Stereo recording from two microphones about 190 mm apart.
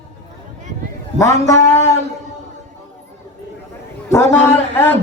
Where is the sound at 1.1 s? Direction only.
15° left (ahead or behind).